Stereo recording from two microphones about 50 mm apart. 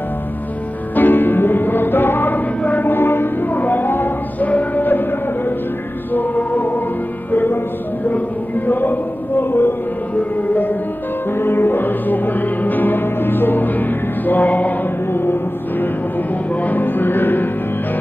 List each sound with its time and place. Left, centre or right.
0.9 s music: left
6.1 s choir: left
7.2 s music: left
8.1 s a sound: left
9.4 s music: left
10.5 s music: left
11.3 s music: left
16.6 s music: left